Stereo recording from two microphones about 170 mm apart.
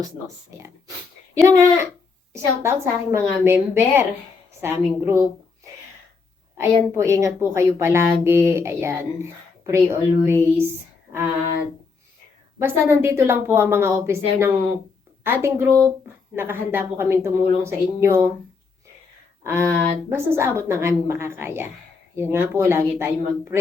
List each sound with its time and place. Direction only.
0.5 s a woman's voice: 20° right (ahead or behind)
6.6 s a woman's voice: 15° right (ahead or behind)
12.5 s a woman's voice: 15° right (ahead or behind)
19.5 s a woman's voice: 15° right (ahead or behind)